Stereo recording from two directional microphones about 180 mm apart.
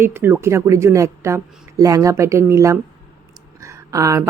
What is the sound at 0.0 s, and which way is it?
Speech, 15° right (ahead or behind).